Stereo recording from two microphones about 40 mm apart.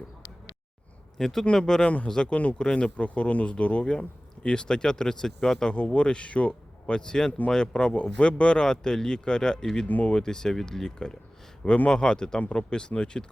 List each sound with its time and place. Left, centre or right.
1.2 s speech: centre
1.8 s speech: left
2.0 s speech: centre
2.3 s speech: left; by 5.7 s centre
5.7 s speech: left
9.8 s speech: left
10.1 s speech: centre